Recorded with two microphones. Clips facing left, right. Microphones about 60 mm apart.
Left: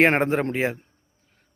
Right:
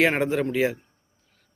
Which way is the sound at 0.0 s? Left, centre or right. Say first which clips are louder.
Left 2 dB; left.